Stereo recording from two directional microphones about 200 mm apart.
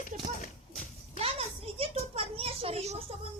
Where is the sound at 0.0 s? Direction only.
40° left (ahead or behind).